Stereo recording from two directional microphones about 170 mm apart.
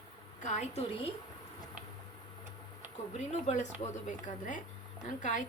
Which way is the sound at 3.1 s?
40° left (ahead or behind).